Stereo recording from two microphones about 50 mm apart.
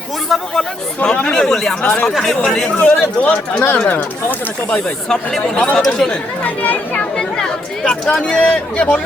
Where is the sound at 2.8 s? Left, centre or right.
Left.